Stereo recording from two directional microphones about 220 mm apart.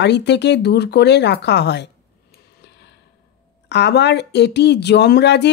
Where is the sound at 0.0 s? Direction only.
50° left (ahead or behind).